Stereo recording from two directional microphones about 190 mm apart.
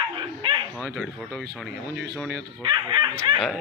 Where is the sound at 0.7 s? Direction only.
5° left (ahead or behind).